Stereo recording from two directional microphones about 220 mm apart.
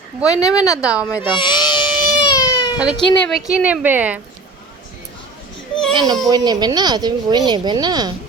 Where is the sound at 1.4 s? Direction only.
20° left (ahead or behind).